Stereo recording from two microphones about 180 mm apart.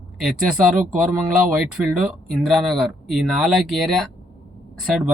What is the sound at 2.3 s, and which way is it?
Speech, centre (ahead or behind).